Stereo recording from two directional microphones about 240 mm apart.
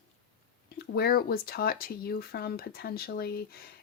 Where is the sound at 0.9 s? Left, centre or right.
Left.